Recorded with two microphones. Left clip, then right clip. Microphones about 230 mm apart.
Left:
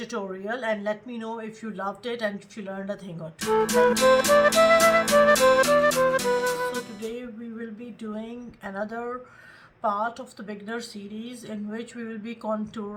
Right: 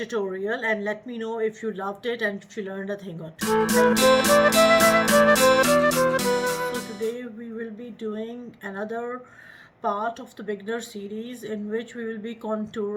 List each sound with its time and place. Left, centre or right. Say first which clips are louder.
0.0 s speech: right 5 dB; centre
3.4 s music: even; centre
8.2 s speech: right 3 dB; centre